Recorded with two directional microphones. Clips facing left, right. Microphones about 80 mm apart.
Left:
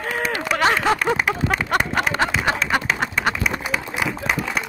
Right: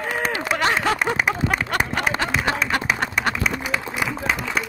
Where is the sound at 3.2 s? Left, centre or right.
Centre.